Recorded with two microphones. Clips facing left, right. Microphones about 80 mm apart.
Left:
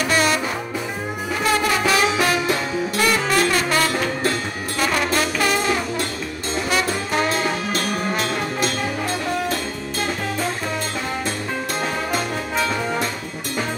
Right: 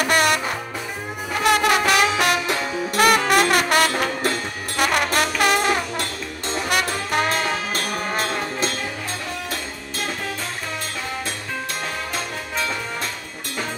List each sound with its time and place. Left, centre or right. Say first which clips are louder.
0.0 s music: even; right
1.4 s music: right 2 dB; right